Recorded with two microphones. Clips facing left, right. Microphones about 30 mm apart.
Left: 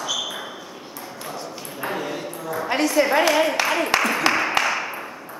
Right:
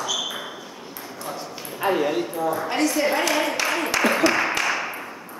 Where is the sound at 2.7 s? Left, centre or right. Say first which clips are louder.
Left 5 dB; centre.